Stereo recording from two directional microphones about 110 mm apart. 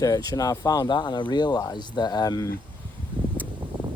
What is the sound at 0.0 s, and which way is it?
Speech, 35° left (ahead or behind).